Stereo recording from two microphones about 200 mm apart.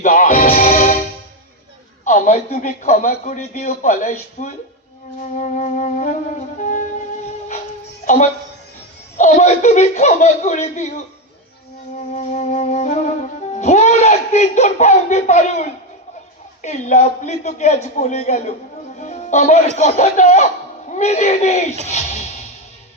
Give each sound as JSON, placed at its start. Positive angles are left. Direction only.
{"t": 0.0, "sound": "music", "side_deg": 40}
{"t": 2.0, "sound": "a woman's voice", "side_deg": 40}
{"t": 9.1, "sound": "a man's voice", "side_deg": 35}
{"t": 11.9, "sound": "a man's voice", "side_deg": 35}
{"t": 18.9, "sound": "music", "side_deg": 35}
{"t": 19.7, "sound": "a man's voice", "side_deg": 35}